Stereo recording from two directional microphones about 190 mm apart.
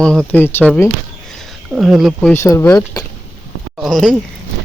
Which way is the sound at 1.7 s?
Centre (ahead or behind).